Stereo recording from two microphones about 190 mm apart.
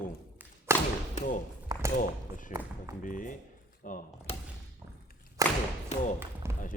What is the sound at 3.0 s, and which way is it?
Speech, 45° left (ahead or behind).